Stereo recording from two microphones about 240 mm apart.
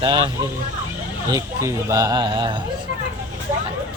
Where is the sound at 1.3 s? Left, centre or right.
Centre.